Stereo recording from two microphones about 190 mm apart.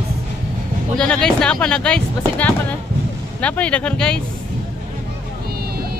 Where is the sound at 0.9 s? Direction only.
5° left (ahead or behind).